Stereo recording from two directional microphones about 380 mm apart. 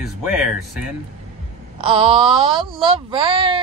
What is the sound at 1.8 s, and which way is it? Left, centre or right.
A woman's voice, centre.